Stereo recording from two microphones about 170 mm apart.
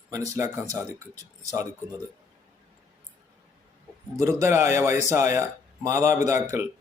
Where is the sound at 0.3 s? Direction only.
15° right (ahead or behind).